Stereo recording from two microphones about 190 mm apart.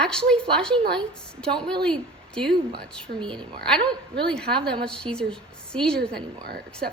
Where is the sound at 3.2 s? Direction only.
25° right (ahead or behind).